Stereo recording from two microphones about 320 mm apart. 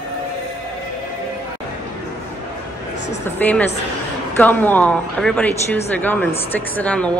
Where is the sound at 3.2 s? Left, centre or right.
Centre.